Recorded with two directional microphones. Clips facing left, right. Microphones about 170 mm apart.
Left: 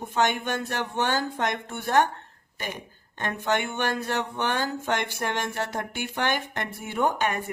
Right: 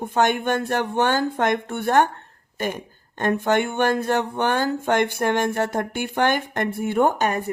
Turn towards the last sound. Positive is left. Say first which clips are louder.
# right 5 dB
turn(degrees=-45)  # may be behind; listen again after turning